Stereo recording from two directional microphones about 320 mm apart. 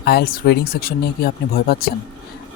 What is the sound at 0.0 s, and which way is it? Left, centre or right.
Speech, left.